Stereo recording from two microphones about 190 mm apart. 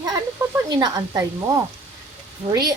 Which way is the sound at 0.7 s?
20° right (ahead or behind).